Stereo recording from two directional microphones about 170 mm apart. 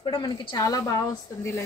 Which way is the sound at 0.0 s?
30° left (ahead or behind).